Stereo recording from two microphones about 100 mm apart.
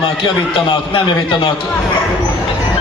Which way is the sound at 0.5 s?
55° left (ahead or behind).